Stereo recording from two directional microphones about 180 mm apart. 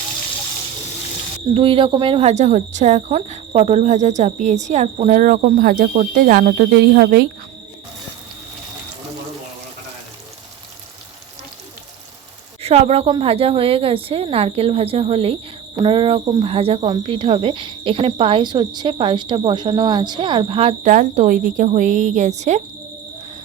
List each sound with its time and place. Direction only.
1.5 s speech: 30° right (ahead or behind); by 7.3 s 55° right (ahead or behind)
12.6 s speech: 35° right (ahead or behind)
20.9 s speech: 45° right (ahead or behind)